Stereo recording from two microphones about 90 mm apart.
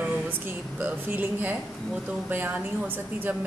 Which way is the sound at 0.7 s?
20° right (ahead or behind).